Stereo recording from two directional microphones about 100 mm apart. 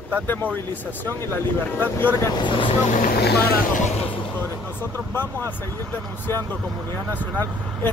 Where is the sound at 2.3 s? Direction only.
55° left (ahead or behind).